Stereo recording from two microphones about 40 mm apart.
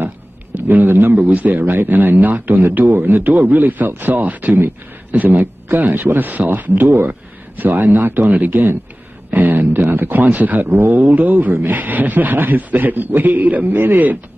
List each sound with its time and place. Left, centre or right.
0.6 s a sound: right
0.8 s a man's voice: right
1.1 s a man's voice: right
1.7 s a man's voice: right
11.0 s a man's voice: right
13.7 s a man's voice: right